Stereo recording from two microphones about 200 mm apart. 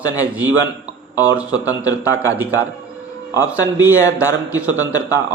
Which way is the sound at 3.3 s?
10° right (ahead or behind).